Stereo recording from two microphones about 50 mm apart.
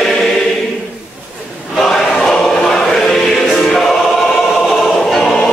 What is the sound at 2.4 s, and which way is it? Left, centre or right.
Choir, centre.